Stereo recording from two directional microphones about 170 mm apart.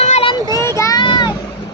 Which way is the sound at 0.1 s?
35° left (ahead or behind).